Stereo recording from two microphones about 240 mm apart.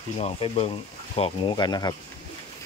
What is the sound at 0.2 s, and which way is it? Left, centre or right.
Speech, left.